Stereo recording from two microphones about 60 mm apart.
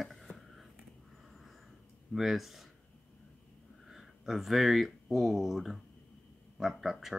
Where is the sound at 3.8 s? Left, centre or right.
Centre.